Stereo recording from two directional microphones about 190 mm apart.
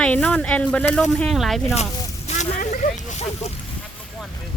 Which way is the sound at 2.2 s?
40° left (ahead or behind).